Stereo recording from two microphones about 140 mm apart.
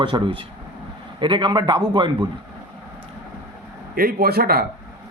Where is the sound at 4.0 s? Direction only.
90° right.